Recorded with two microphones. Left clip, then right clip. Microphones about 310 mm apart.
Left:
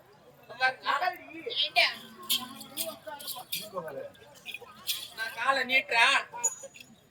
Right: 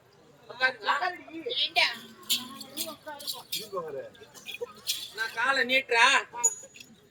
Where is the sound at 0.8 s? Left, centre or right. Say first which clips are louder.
Right 1 dB; centre.